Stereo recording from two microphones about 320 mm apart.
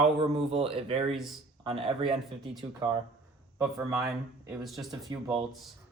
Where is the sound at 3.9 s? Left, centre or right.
Centre.